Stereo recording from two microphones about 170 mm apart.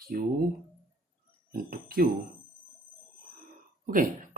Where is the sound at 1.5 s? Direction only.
60° right (ahead or behind).